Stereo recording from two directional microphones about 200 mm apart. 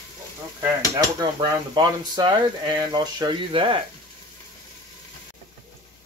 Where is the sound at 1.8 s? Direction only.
20° right (ahead or behind).